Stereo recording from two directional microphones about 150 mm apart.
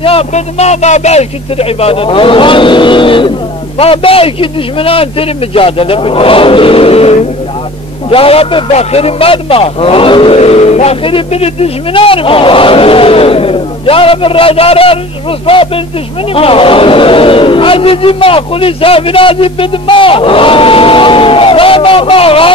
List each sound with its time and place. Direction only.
0.0 s speech: 40° left (ahead or behind)